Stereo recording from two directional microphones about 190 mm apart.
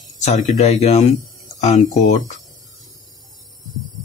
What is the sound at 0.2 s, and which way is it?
Speech, 40° left (ahead or behind).